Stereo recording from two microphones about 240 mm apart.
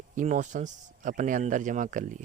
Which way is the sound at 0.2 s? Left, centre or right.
Right.